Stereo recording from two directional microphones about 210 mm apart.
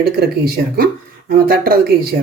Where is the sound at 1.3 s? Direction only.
45° right (ahead or behind).